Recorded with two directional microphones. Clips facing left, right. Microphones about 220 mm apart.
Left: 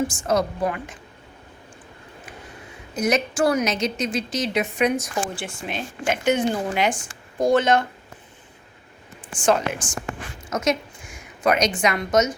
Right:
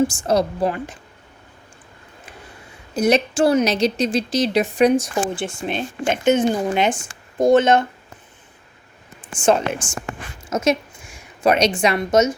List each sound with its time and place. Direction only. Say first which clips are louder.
0.2 s a woman's voice: right 3 dB; 30° right (ahead or behind)
2.9 s a woman's voice: right 5 dB; 30° right (ahead or behind)
9.4 s a woman's voice: right 3 dB; 25° right (ahead or behind)